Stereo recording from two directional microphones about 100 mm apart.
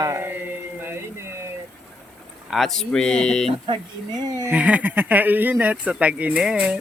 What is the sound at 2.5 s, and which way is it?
Speech, centre (ahead or behind).